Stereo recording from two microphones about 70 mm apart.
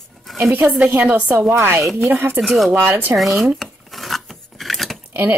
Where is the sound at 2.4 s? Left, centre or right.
Centre.